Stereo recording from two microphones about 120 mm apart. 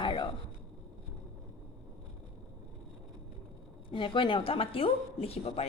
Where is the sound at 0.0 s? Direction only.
40° left (ahead or behind).